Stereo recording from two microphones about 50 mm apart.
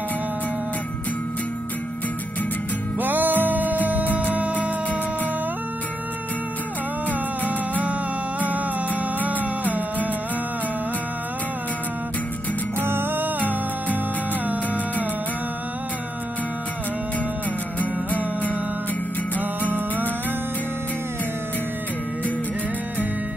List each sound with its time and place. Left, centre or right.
3.0 s music: right
9.2 s music: right
12.8 s music: right
17.7 s music: left